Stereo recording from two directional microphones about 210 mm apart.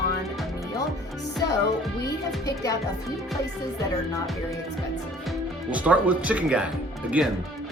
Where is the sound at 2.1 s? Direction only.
15° left (ahead or behind).